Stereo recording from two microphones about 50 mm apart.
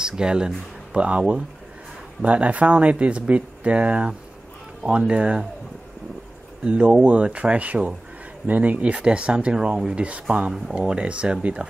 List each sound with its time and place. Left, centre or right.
0.0 s speech: centre
6.6 s speech: right